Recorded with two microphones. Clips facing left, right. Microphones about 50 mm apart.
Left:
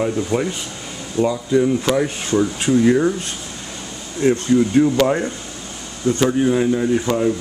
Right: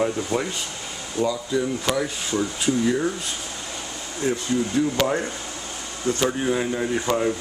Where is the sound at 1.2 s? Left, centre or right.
Left.